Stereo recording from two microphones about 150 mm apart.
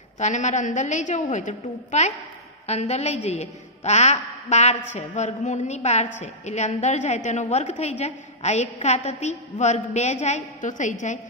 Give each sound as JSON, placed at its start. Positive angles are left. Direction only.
{"t": 0.2, "sound": "a woman's voice", "side_deg": 50}